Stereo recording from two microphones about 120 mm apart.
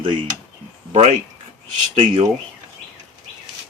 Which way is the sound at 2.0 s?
45° right (ahead or behind).